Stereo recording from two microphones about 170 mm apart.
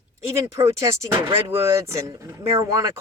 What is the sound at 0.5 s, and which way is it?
Speech, 20° right (ahead or behind).